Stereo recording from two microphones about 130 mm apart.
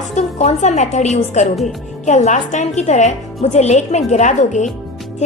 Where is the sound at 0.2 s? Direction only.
60° left (ahead or behind).